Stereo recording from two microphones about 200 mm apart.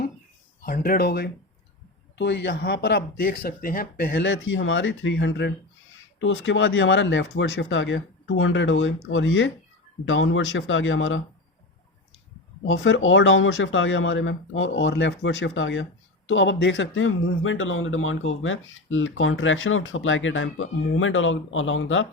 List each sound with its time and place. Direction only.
0.6 s speech: 45° left (ahead or behind); by 11.2 s 75° left (ahead or behind)
12.6 s speech: 70° left (ahead or behind)